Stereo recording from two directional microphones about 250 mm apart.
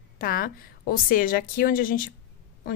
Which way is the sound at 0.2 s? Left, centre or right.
Left.